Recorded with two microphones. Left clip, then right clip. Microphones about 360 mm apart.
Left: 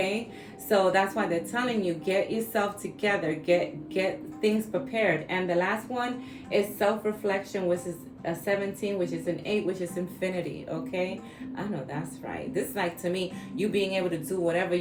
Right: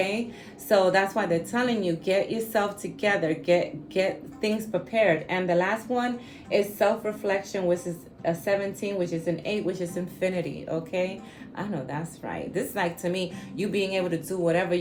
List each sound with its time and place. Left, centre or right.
0.7 s a woman's voice: right